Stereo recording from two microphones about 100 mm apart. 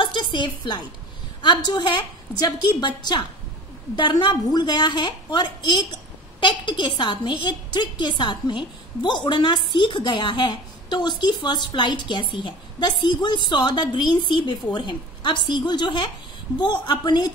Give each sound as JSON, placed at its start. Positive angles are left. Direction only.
{"t": 0.0, "sound": "a woman's voice", "side_deg": 50}